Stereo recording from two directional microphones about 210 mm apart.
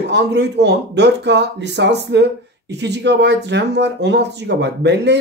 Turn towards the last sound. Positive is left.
turn(degrees=-55)  # may be behind; listen again after turning